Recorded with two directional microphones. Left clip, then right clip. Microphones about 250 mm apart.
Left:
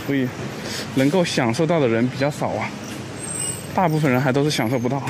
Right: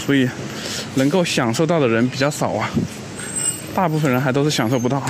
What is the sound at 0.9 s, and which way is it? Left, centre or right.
Speech, centre.